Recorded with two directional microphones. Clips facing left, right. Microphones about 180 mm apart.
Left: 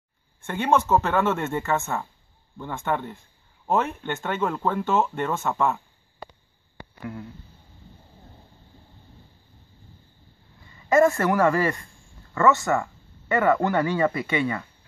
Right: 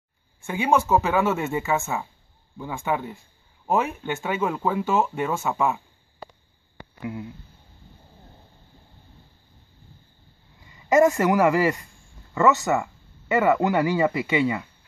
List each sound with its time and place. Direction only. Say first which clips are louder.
0.5 s speech: even; 5° right (ahead or behind)
10.6 s speech: right 1 dB; 15° right (ahead or behind)